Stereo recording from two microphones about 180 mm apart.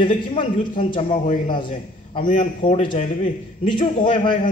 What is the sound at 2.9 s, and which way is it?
Speech, 45° left (ahead or behind).